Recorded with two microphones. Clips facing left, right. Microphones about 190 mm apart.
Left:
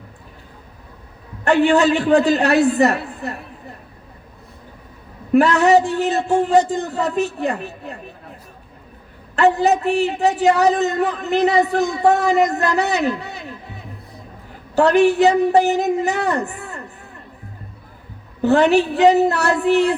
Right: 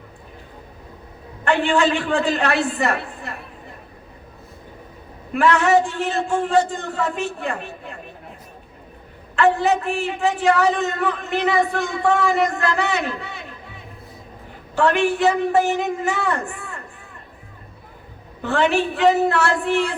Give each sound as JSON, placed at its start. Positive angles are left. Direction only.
{"t": 1.5, "sound": "a woman's voice", "side_deg": 40}
{"t": 5.3, "sound": "a woman's voice", "side_deg": 40}
{"t": 6.2, "sound": "a man's voice", "side_deg": 20}
{"t": 6.7, "sound": "a woman's voice", "side_deg": 40}
{"t": 9.3, "sound": "a woman's voice", "side_deg": 40}
{"t": 14.8, "sound": "a woman's voice", "side_deg": 40}
{"t": 18.4, "sound": "a woman's voice", "side_deg": 40}